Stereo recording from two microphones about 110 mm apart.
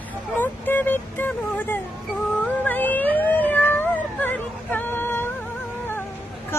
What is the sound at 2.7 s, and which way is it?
Cat, 15° left (ahead or behind).